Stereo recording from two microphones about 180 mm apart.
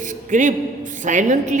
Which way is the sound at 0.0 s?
45° right (ahead or behind).